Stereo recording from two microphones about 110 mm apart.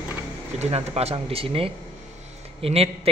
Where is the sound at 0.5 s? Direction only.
70° right (ahead or behind).